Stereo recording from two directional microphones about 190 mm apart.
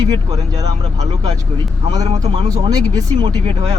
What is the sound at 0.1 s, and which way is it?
Speech, 20° right (ahead or behind).